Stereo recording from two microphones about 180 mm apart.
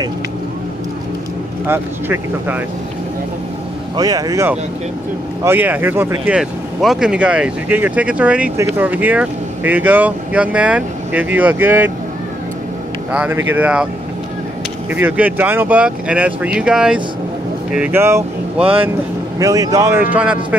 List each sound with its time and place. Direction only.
1.7 s speech: 10° right (ahead or behind)
3.9 s speech: 20° right (ahead or behind)
13.1 s speech: 5° right (ahead or behind)
14.9 s speech: 10° right (ahead or behind)
18.6 s speech: 30° right (ahead or behind)
19.3 s speech: 20° right (ahead or behind)